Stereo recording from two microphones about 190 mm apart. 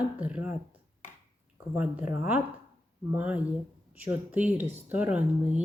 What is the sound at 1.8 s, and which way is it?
Speech, 10° right (ahead or behind).